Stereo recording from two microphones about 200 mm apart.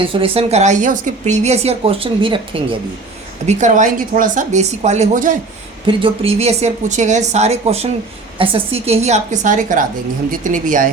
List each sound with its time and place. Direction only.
0.0 s a woman's voice: 25° right (ahead or behind)
3.4 s a woman's voice: 35° right (ahead or behind)